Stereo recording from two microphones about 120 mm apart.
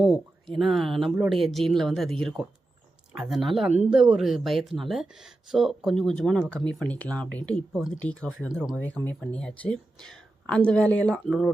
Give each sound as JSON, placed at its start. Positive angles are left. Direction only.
{"t": 0.0, "sound": "speech", "side_deg": 0}
{"t": 8.4, "sound": "speech", "side_deg": -5}
{"t": 8.7, "sound": "speech", "side_deg": 15}